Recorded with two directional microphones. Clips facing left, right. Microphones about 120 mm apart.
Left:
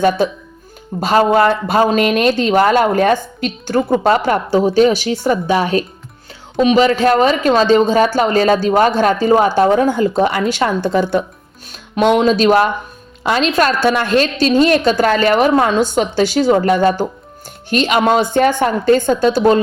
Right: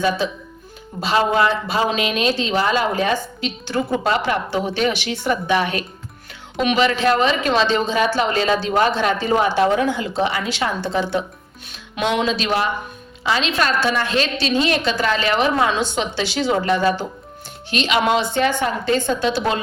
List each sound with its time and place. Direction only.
0.2 s speech: 50° left (ahead or behind)